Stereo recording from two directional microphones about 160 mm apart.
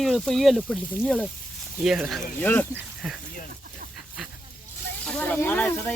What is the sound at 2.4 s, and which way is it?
Speech, 10° left (ahead or behind).